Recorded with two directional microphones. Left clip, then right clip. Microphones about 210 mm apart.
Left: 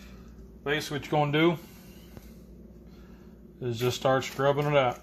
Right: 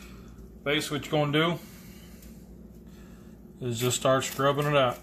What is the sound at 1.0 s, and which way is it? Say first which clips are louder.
Speech: left 2 dB; 25° left (ahead or behind).